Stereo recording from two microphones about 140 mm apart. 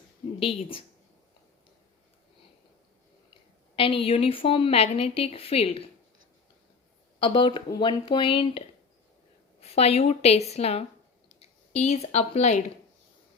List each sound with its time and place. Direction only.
0.3 s speech: 40° left (ahead or behind)
3.8 s a woman's voice: 40° left (ahead or behind)
7.2 s a woman's voice: 40° left (ahead or behind)